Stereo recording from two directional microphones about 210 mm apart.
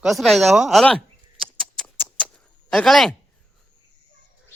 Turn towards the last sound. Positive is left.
turn(degrees=0)  # may be behind; listen again after turning